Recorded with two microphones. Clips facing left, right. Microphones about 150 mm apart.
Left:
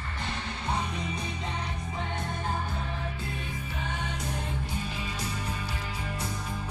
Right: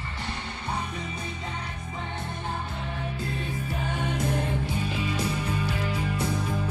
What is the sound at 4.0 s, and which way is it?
Music, 55° right (ahead or behind).